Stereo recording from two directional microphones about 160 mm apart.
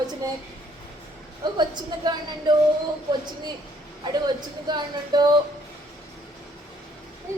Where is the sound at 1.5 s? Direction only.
25° right (ahead or behind).